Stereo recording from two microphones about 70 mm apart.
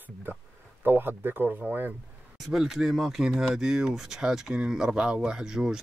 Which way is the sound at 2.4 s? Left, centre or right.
Centre.